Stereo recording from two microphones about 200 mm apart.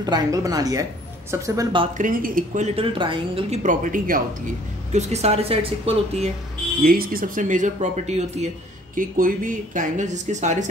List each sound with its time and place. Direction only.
0.0 s speech: 20° right (ahead or behind)
2.0 s speech: 45° right (ahead or behind)
6.8 s speech: 50° right (ahead or behind)